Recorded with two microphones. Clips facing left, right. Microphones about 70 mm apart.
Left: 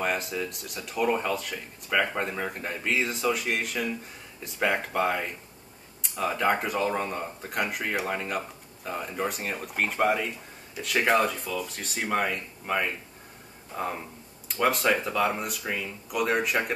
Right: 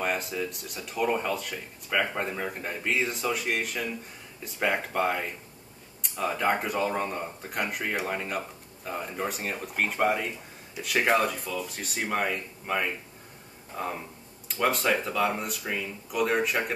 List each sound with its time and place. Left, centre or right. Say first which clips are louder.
0.0 s speech: left 1 dB; centre